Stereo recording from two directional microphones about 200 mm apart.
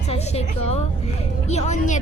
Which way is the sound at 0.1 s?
30° left (ahead or behind).